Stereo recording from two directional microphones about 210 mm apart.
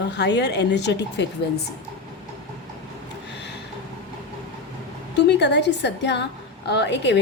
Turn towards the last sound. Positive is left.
turn(degrees=60)  # may be behind; listen again after turning